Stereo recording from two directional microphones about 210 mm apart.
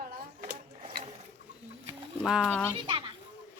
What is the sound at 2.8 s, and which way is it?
Children playing, 25° right (ahead or behind).